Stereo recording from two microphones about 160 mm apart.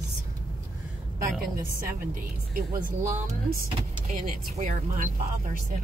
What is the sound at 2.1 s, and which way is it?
Speech, 60° right (ahead or behind).